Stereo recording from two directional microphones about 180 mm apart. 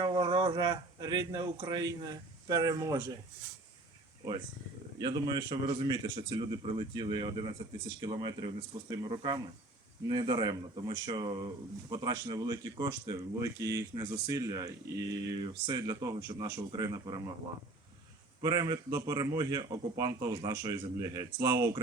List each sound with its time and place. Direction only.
0.0 s speech: 25° right (ahead or behind)
4.9 s speech: 25° right (ahead or behind)
18.4 s speech: 20° right (ahead or behind)